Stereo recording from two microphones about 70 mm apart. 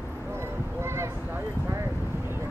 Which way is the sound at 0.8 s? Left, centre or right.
Right.